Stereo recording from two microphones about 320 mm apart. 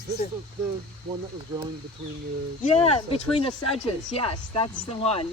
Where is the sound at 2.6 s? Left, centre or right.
Centre.